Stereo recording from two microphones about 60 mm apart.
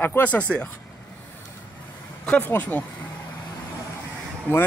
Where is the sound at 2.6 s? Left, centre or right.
Left.